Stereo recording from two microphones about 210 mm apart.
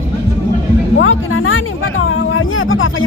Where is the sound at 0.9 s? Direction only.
70° left (ahead or behind).